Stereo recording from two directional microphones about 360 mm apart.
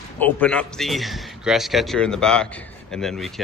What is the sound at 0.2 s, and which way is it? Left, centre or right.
Speech, centre.